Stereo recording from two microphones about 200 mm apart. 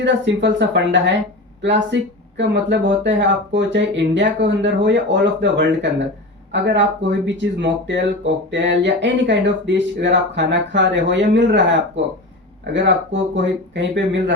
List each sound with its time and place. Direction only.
0.0 s speech: 60° right (ahead or behind)